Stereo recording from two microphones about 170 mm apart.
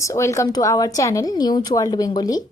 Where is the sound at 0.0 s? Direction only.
15° left (ahead or behind).